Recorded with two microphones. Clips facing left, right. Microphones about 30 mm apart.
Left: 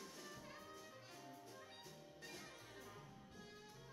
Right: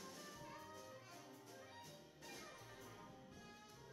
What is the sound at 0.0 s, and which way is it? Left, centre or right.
Music, centre.